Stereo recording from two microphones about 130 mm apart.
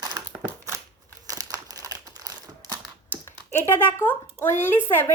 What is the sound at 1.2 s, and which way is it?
Crumpling, 25° right (ahead or behind).